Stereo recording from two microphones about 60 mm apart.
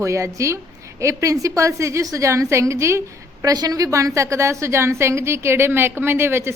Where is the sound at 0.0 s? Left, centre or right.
Right.